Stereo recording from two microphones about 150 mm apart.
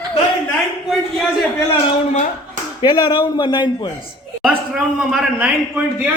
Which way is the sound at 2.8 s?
30° left (ahead or behind).